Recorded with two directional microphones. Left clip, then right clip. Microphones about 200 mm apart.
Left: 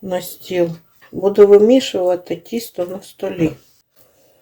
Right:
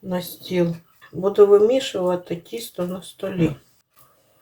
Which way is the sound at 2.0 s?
35° left (ahead or behind).